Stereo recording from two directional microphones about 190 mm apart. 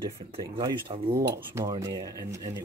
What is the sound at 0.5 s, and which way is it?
Speech, 25° right (ahead or behind).